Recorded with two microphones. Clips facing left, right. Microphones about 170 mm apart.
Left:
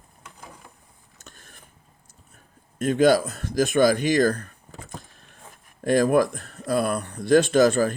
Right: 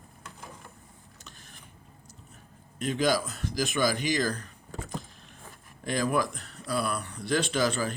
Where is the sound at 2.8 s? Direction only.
50° left (ahead or behind).